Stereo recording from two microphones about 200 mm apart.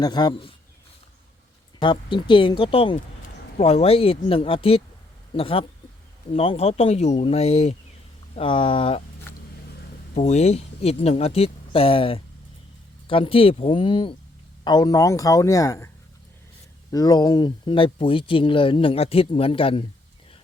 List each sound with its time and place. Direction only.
0.0 s speech: 20° left (ahead or behind)
1.8 s speech: 25° left (ahead or behind)
9.3 s vehicle: 10° left (ahead or behind)
10.2 s speech: 35° left (ahead or behind); by 15.9 s 15° left (ahead or behind)
16.9 s speech: 20° left (ahead or behind)